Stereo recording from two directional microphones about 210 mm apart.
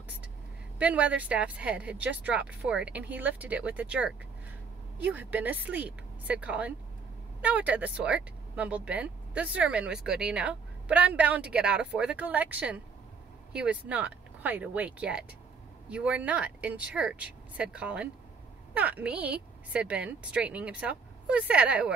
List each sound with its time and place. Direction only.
0.7 s speech: 5° right (ahead or behind)